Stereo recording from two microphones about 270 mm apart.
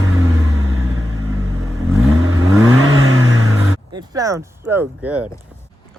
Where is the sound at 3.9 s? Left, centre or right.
Centre.